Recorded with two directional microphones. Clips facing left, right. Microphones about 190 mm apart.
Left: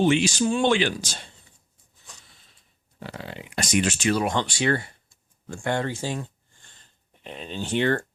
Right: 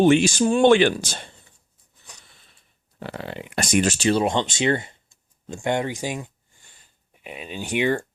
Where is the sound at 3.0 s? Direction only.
60° right (ahead or behind); by 8.0 s 10° right (ahead or behind).